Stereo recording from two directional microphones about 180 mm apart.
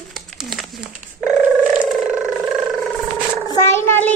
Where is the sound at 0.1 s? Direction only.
Centre (ahead or behind).